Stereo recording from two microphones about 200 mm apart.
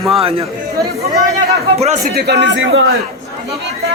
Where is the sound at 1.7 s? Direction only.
30° right (ahead or behind).